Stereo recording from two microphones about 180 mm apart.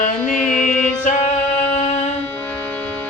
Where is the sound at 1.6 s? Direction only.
35° left (ahead or behind).